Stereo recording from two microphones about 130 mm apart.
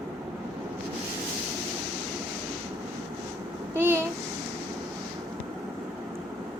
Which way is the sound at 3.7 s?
20° right (ahead or behind).